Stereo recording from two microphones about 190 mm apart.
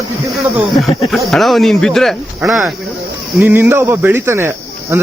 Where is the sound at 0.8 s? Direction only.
Centre (ahead or behind).